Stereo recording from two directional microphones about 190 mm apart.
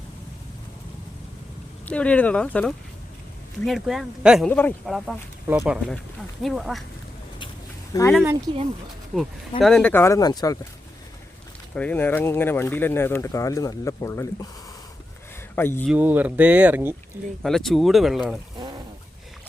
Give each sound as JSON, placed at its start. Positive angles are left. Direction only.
{"t": 1.8, "sound": "speech", "side_deg": 5}
{"t": 5.5, "sound": "speech", "side_deg": -10}
{"t": 7.9, "sound": "speech", "side_deg": 20}
{"t": 8.5, "sound": "speech", "side_deg": -20}
{"t": 9.6, "sound": "speech", "side_deg": 5}
{"t": 11.7, "sound": "speech", "side_deg": 5}
{"t": 15.5, "sound": "speech", "side_deg": 10}
{"t": 15.9, "sound": "speech", "side_deg": -10}